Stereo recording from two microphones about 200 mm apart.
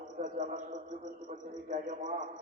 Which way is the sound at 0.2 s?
35° right (ahead or behind).